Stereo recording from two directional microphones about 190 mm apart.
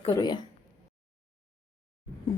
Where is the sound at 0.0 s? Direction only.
20° left (ahead or behind).